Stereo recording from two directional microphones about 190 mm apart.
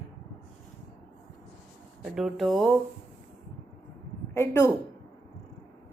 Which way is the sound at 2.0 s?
Centre (ahead or behind).